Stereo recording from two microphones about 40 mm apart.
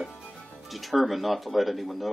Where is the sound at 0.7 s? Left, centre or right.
Centre.